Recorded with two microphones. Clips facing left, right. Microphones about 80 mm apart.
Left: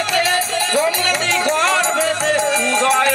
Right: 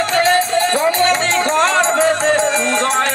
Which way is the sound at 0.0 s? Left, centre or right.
Right.